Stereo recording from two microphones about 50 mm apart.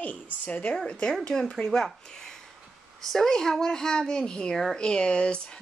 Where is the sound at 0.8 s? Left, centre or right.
Centre.